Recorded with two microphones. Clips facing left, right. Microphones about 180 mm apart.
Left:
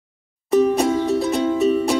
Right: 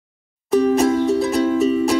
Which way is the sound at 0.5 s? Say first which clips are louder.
Right 1 dB; centre (ahead or behind).